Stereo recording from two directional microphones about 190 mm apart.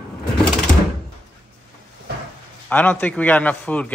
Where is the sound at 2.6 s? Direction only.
10° left (ahead or behind).